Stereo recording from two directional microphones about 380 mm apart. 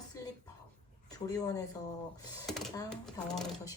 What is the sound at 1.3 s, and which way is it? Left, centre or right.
Speech, centre.